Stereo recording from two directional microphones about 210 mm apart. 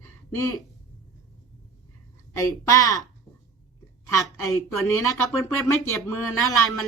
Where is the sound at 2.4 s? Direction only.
15° left (ahead or behind).